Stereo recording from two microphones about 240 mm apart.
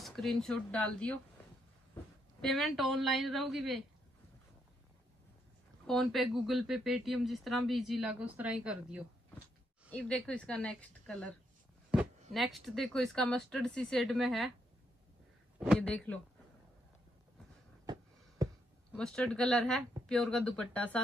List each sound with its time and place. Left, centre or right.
0.0 s speech: centre
2.4 s speech: centre
5.9 s speech: centre
12.4 s speech: centre
15.6 s speech: centre
18.4 s a sound: centre
18.9 s speech: centre